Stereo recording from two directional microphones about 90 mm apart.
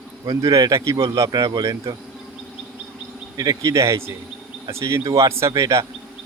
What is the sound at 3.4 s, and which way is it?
Speech, 40° right (ahead or behind).